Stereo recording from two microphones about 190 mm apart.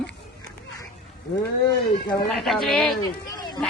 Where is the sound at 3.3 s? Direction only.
20° left (ahead or behind).